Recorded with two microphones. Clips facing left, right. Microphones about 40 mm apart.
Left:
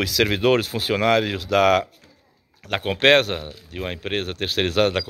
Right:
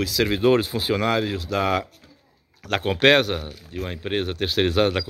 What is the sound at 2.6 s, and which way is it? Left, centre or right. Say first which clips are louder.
Speech: right 1 dB; centre.